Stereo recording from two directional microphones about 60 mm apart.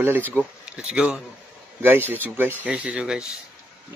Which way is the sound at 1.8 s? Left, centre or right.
Right.